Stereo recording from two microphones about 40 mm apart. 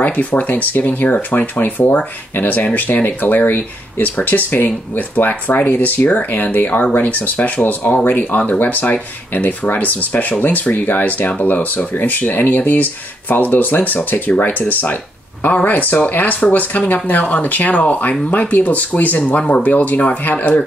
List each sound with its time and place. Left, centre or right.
0.0 s speech: left